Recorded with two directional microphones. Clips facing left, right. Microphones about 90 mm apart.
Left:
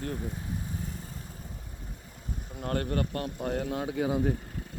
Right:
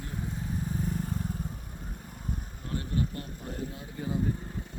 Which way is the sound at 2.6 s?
65° left (ahead or behind).